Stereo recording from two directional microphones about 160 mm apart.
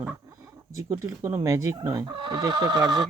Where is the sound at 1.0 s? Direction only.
20° right (ahead or behind).